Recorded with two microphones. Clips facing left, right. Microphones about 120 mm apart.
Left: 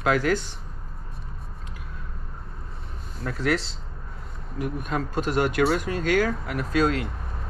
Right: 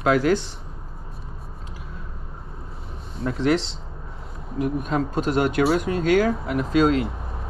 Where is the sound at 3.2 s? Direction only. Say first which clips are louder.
Right 4 dB; 30° right (ahead or behind).